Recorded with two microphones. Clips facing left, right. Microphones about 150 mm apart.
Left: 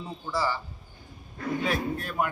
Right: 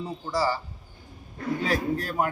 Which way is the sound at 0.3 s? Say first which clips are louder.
Right 3 dB; 40° right (ahead or behind).